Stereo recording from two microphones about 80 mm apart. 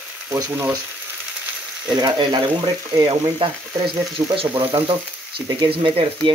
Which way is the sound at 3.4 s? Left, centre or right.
Right.